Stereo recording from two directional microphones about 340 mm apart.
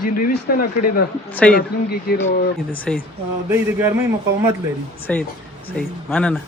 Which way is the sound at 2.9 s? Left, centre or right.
Centre.